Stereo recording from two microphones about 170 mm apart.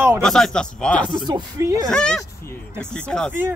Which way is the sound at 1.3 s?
25° right (ahead or behind).